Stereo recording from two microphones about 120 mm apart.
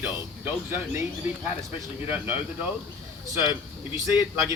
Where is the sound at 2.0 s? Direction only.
15° right (ahead or behind).